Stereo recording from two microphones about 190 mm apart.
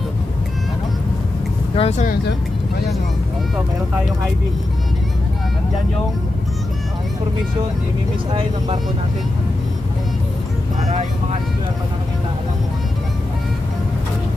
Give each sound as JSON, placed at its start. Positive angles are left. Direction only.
{"t": 1.8, "sound": "speech", "side_deg": 35}
{"t": 8.3, "sound": "speech", "side_deg": -30}